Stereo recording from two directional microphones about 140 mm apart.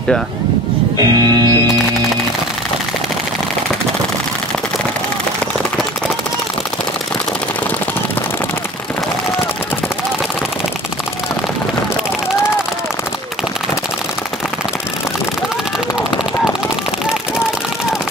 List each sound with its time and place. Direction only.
0.9 s music: 25° right (ahead or behind)